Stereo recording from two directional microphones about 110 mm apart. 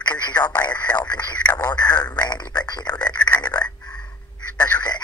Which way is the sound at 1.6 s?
40° left (ahead or behind).